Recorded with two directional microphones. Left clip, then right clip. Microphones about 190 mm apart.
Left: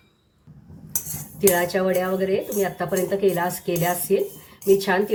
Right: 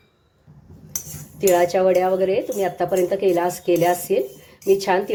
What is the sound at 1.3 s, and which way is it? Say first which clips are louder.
Speech: right 3 dB; 25° right (ahead or behind).